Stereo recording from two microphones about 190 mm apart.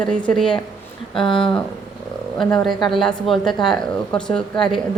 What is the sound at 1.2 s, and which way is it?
Speech, 25° left (ahead or behind).